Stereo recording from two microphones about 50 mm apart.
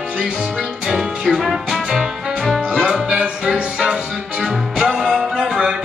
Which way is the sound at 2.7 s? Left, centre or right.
Centre.